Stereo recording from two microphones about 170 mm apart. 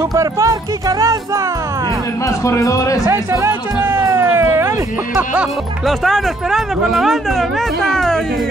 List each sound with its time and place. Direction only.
0.1 s speech: 20° right (ahead or behind)
2.2 s speech: 20° left (ahead or behind)
3.1 s speech: 15° right (ahead or behind); by 8.2 s centre (ahead or behind)